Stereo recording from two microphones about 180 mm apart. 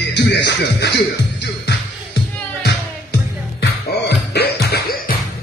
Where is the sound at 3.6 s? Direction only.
65° left (ahead or behind).